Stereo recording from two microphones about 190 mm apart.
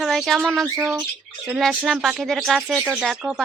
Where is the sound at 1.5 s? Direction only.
5° right (ahead or behind).